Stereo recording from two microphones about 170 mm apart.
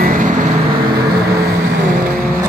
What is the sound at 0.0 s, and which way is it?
Vehicle, 50° right (ahead or behind).